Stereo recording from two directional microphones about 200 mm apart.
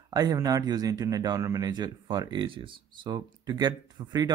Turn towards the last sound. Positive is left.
turn(degrees=-20)  # may be behind; listen again after turning